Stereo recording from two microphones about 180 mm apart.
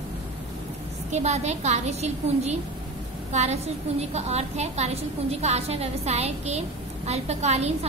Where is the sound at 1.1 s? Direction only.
40° right (ahead or behind).